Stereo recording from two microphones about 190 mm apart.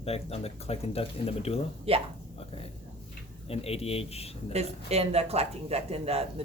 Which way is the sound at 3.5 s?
30° left (ahead or behind).